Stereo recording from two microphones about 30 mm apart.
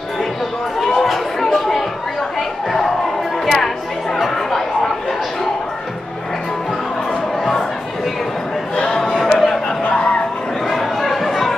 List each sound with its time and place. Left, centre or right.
0.7 s chatter: centre
3.4 s chatter: centre
8.7 s a sound: left; by 9.6 s centre
9.8 s music: left
10.7 s chatter: centre